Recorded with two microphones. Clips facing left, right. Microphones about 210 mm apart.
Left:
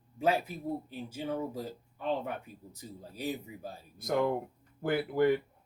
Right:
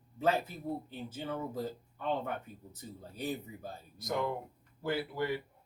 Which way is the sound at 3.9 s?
55° left (ahead or behind).